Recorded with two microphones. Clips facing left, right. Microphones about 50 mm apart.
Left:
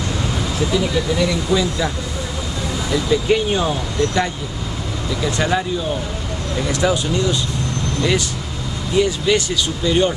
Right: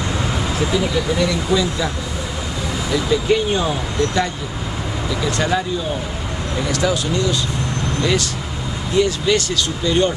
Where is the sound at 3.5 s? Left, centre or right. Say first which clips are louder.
Even; centre.